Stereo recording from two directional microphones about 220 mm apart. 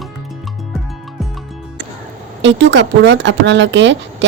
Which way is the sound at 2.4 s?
55° right (ahead or behind).